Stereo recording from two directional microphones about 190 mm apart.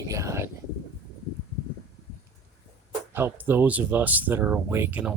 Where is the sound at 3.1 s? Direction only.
10° right (ahead or behind).